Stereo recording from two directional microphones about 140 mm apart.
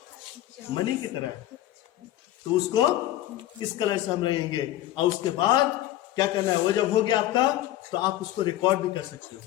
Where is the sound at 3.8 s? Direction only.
30° left (ahead or behind).